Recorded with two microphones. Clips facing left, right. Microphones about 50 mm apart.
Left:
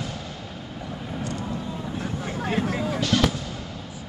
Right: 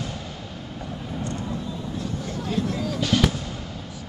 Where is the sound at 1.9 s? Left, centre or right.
Left.